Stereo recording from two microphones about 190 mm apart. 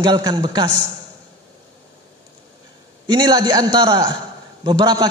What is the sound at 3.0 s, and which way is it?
A man's voice, 20° right (ahead or behind).